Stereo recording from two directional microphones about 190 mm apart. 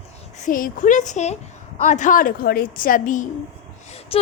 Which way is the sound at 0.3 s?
45° left (ahead or behind).